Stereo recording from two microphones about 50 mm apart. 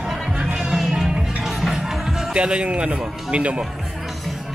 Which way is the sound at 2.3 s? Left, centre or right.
Right.